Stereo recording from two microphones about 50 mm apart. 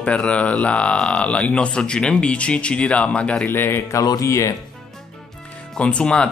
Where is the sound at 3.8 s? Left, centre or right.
Left.